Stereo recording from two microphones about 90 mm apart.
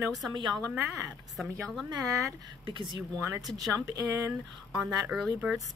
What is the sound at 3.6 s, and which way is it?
Speech, 40° right (ahead or behind).